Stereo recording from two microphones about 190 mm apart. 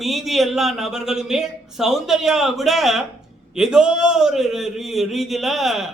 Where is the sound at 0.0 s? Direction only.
Centre (ahead or behind).